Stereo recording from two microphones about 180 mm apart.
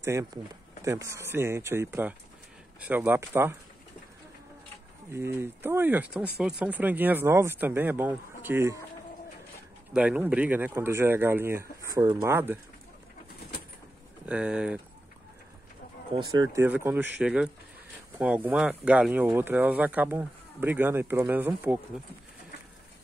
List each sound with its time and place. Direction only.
0.0 s speech: 15° right (ahead or behind)
5.1 s speech: 15° right (ahead or behind)
9.9 s speech: 10° right (ahead or behind)
14.2 s speech: 5° right (ahead or behind)
16.1 s speech: 20° right (ahead or behind)
16.6 s speech: 10° right (ahead or behind)